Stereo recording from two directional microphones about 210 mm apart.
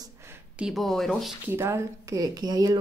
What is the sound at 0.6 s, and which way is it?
Speech, centre (ahead or behind).